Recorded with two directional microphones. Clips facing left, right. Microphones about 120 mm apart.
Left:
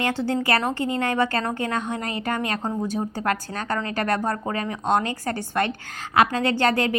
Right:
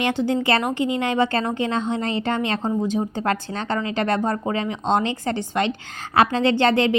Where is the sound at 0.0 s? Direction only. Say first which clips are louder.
Right 3 dB; 15° right (ahead or behind).